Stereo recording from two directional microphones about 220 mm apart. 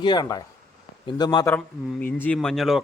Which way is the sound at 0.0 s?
20° left (ahead or behind).